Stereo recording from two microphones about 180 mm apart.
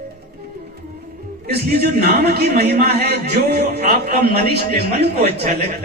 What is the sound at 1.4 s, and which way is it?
A man's voice, 60° right (ahead or behind).